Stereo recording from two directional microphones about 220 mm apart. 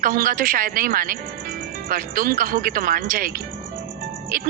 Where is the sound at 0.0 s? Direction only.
40° right (ahead or behind).